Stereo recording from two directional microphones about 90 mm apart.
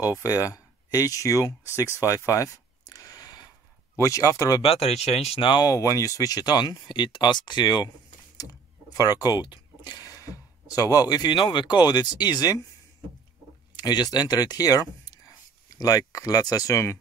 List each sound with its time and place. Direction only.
0.0 s speech: 35° left (ahead or behind)
1.8 s a sound: 35° left (ahead or behind)
4.0 s speech: 35° left (ahead or behind)
4.6 s speech: 90° left; by 5.7 s 65° left (ahead or behind)
5.7 s speech: 35° left (ahead or behind)
13.7 s speech: 50° left (ahead or behind); by 17.0 s 35° left (ahead or behind)